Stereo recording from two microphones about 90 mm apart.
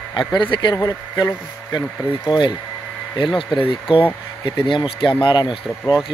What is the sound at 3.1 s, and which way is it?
Speech, 65° left (ahead or behind).